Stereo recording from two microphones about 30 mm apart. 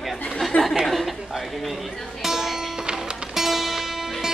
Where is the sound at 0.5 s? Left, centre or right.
Left.